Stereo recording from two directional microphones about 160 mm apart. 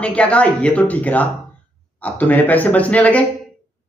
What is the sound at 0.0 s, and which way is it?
A man's voice, 10° left (ahead or behind).